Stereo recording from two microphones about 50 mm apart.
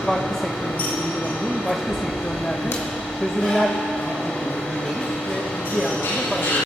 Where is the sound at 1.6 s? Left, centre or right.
Centre.